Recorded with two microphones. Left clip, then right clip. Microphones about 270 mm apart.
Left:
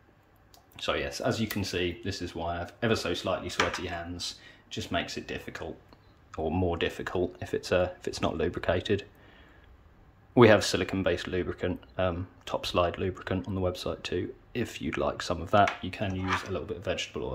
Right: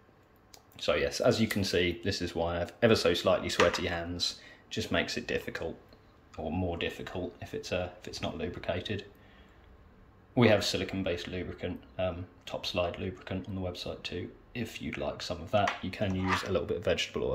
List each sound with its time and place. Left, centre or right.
0.7 s speech: centre
6.5 s speech: centre
10.3 s speech: centre
16.3 s speech: centre